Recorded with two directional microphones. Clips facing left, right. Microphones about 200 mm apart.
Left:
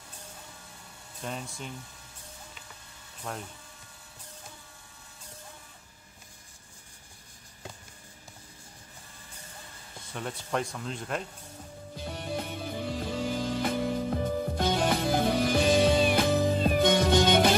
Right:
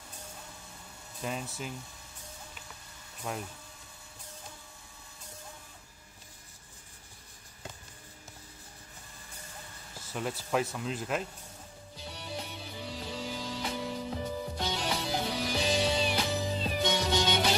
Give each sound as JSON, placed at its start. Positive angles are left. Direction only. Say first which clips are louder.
{"t": 1.2, "sound": "speech", "louder": "right 1 dB", "side_deg": -5}
{"t": 3.3, "sound": "speech", "louder": "right 1 dB", "side_deg": -10}
{"t": 10.0, "sound": "speech", "louder": "right 2 dB", "side_deg": -5}
{"t": 11.9, "sound": "music", "louder": "left 7 dB", "side_deg": 50}